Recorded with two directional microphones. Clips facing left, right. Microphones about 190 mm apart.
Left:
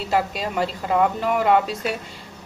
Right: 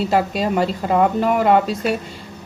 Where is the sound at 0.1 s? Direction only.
40° right (ahead or behind).